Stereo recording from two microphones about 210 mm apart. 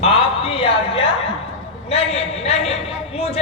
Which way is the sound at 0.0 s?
25° left (ahead or behind).